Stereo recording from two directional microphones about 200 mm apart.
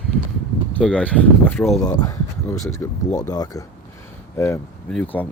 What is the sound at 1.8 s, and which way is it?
Speech, 20° left (ahead or behind).